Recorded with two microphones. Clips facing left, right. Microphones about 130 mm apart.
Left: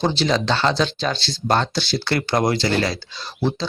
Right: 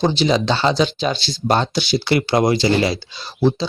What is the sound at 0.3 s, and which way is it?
Speech, 15° right (ahead or behind).